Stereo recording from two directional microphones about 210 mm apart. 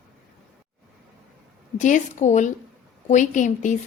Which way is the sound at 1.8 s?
35° left (ahead or behind).